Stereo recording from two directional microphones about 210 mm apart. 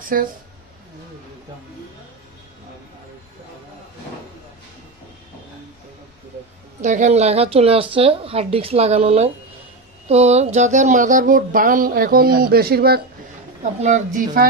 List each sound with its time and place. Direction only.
0.0 s speech: 40° right (ahead or behind)
6.8 s speech: 35° right (ahead or behind)
13.7 s speech: 35° right (ahead or behind)